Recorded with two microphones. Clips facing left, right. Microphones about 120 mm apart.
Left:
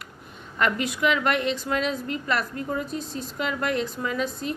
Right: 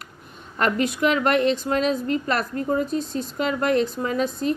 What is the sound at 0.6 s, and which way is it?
A woman's voice, 40° right (ahead or behind).